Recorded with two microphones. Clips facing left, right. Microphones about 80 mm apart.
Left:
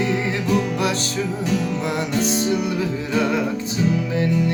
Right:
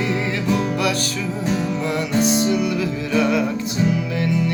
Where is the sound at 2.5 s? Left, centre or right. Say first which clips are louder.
Right 1 dB; left.